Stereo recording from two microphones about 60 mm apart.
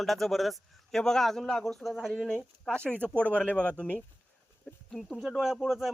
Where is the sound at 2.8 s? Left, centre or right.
Right.